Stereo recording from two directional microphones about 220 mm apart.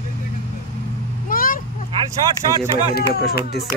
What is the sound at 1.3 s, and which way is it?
Vehicle, 40° left (ahead or behind).